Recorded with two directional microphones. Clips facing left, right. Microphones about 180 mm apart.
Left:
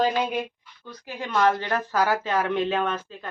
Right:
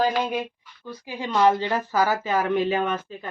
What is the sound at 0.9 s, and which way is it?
Speech, 10° right (ahead or behind).